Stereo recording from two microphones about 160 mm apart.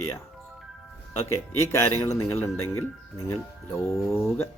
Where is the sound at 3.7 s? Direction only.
Centre (ahead or behind).